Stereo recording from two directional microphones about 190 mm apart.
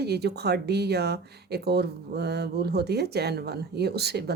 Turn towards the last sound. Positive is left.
turn(degrees=-60)  # may be behind; listen again after turning